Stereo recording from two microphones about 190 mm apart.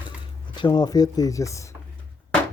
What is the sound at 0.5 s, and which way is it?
Speech, 25° left (ahead or behind).